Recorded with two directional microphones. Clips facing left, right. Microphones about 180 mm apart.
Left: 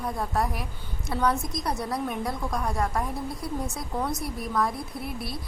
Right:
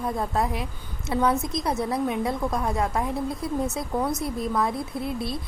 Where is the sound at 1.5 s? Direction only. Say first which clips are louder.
Right 4 dB; 25° right (ahead or behind).